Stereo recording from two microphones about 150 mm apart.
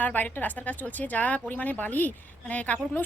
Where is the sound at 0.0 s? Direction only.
10° left (ahead or behind).